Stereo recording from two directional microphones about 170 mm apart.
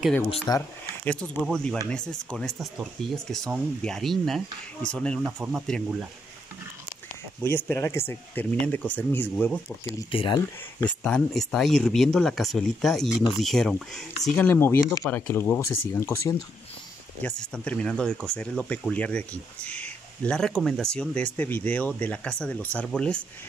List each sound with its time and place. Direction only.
0.5 s speech: 10° left (ahead or behind)
5.2 s speech: 5° right (ahead or behind)
7.4 s speech: 15° left (ahead or behind)
10.1 s speech: 30° left (ahead or behind)
10.8 s speech: 5° left (ahead or behind)
17.2 s speech: 5° left (ahead or behind)